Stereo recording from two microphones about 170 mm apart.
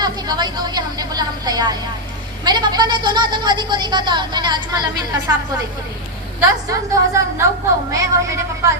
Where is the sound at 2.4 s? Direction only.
25° right (ahead or behind).